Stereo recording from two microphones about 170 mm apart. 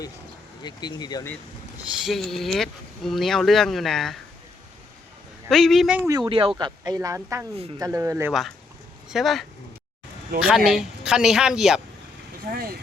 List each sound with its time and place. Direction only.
0.6 s speech: 25° left (ahead or behind)
1.9 s speech: centre (ahead or behind)
5.5 s speech: 5° left (ahead or behind)
6.1 s speech: 25° right (ahead or behind)
8.3 s speech: centre (ahead or behind)
12.5 s speech: 50° right (ahead or behind)